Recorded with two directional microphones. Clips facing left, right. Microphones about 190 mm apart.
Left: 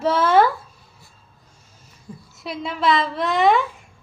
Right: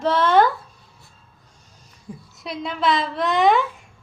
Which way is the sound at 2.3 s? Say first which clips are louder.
Left 1 dB; centre (ahead or behind).